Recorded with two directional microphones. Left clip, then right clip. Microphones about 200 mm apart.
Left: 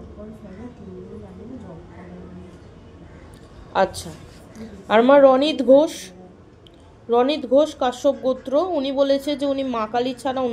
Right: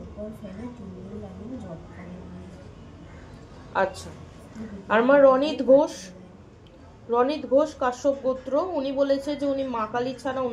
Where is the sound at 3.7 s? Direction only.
35° left (ahead or behind).